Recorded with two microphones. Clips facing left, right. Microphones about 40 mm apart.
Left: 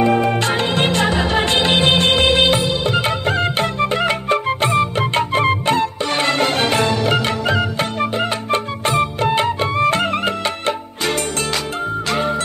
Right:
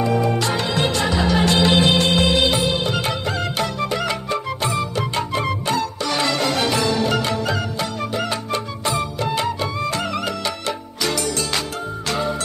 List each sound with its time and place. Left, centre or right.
0.0 s music: left
12.1 s music: left